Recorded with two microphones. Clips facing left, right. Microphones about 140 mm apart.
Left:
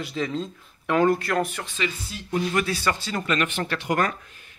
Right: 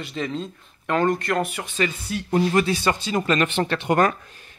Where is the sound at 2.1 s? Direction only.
60° right (ahead or behind).